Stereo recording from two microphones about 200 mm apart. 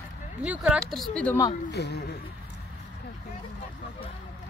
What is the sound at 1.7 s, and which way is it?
Speech, 55° left (ahead or behind).